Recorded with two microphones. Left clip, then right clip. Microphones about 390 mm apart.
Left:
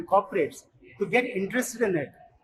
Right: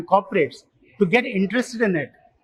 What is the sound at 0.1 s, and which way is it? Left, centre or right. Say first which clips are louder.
A man's voice: right 5 dB; right.